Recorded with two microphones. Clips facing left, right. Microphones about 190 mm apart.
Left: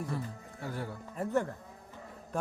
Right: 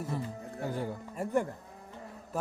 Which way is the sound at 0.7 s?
15° right (ahead or behind).